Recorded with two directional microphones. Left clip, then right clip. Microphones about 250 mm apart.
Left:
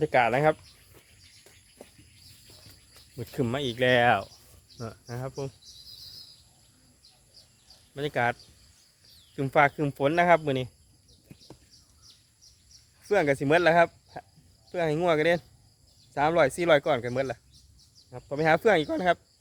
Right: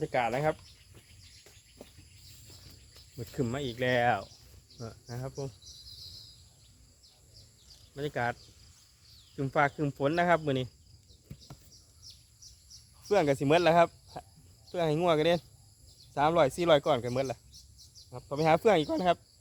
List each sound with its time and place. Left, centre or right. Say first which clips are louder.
0.0 s speech: left 7 dB; left
3.2 s speech: left 5 dB; left
7.9 s speech: left 5 dB; left; by 10.7 s centre
13.1 s speech: left 2 dB; centre